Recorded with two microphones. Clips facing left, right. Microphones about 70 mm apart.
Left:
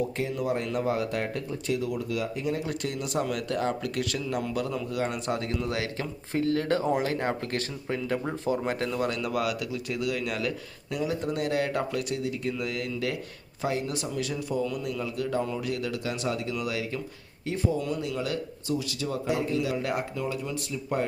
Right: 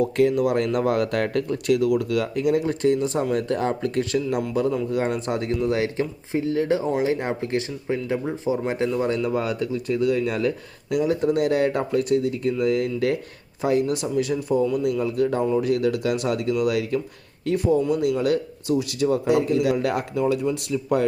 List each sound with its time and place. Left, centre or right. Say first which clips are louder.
0.0 s speech: right 10 dB; right
2.6 s speech: right 11 dB; right; by 8.9 s centre
9.0 s speech: right 5 dB; right
18.2 s speech: right 9 dB; right
19.3 s speech: right 5 dB; right